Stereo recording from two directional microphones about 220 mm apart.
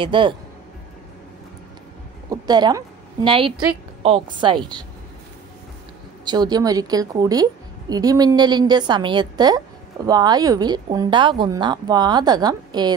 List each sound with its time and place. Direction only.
0.0 s speech: 20° right (ahead or behind)
2.2 s a sound: 20° right (ahead or behind)
3.3 s speech: 25° right (ahead or behind)
6.2 s a woman's voice: 20° right (ahead or behind)